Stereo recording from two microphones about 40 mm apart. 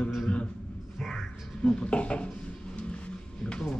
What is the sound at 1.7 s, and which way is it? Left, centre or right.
Speech, left.